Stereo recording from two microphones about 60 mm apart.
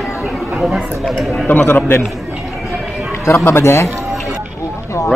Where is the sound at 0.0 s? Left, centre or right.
Centre.